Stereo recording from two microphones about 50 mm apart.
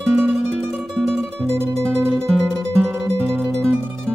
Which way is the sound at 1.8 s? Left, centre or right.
Right.